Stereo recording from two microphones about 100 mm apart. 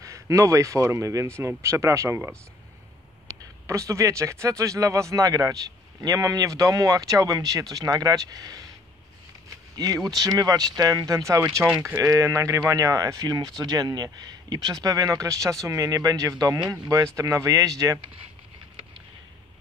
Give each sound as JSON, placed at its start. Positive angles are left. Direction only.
{"t": 0.0, "sound": "speech", "side_deg": -35}
{"t": 3.6, "sound": "speech", "side_deg": -30}
{"t": 9.8, "sound": "speech", "side_deg": -40}